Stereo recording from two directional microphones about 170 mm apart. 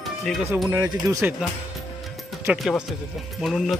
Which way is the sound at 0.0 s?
Centre (ahead or behind).